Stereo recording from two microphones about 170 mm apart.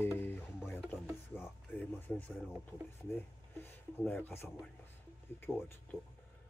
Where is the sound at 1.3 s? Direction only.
10° left (ahead or behind).